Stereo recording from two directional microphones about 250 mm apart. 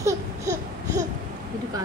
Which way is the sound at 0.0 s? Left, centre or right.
Centre.